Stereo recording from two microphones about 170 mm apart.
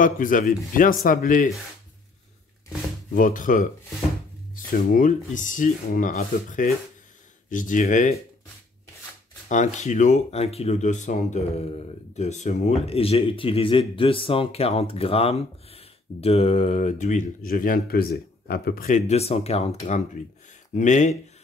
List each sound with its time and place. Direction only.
0.0 s speech: 50° left (ahead or behind)
3.1 s speech: 50° left (ahead or behind)
9.5 s speech: 45° left (ahead or behind); by 18.9 s 65° left (ahead or behind)
18.9 s speech: 40° left (ahead or behind)